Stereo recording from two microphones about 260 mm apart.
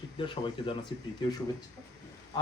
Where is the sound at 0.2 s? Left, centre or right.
Centre.